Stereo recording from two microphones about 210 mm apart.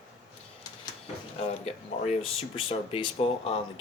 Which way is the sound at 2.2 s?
25° left (ahead or behind).